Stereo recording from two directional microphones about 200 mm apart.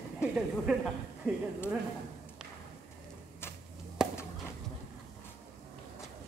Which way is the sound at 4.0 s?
5° right (ahead or behind).